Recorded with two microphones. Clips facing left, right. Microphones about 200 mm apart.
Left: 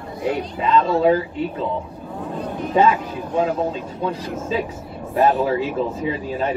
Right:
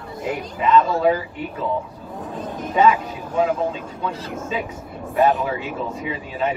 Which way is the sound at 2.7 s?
30° left (ahead or behind).